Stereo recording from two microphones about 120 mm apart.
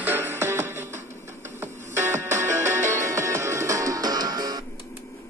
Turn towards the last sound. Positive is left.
turn(degrees=-35)  # may be behind; listen again after turning